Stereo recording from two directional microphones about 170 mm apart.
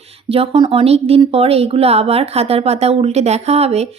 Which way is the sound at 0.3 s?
30° right (ahead or behind).